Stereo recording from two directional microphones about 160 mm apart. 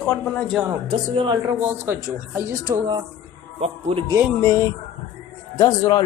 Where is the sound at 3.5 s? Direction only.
40° right (ahead or behind).